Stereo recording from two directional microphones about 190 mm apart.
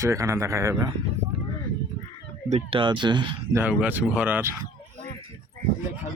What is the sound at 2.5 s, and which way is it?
Speech, 30° right (ahead or behind).